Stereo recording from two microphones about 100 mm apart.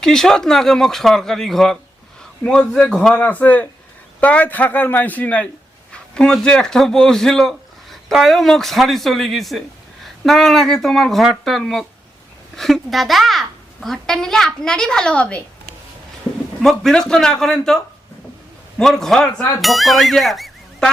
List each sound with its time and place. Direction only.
0.0 s a child's voice: 5° left (ahead or behind)
3.2 s a man's voice: 15° left (ahead or behind)
16.6 s a child's voice: 5° left (ahead or behind)
18.8 s a child's voice: 5° left (ahead or behind)